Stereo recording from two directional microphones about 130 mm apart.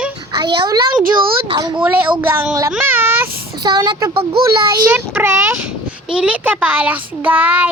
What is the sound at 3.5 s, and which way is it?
Speech, 30° right (ahead or behind).